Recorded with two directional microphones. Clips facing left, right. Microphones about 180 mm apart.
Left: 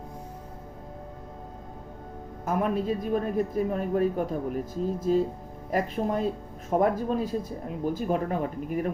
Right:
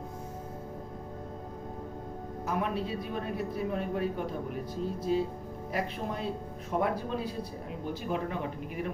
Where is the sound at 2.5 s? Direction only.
45° left (ahead or behind).